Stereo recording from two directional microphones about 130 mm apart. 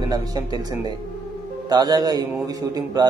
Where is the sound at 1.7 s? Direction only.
30° right (ahead or behind).